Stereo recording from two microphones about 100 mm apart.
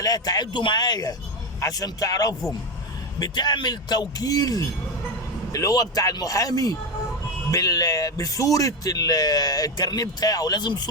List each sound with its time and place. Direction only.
0.0 s a man's voice: 40° left (ahead or behind)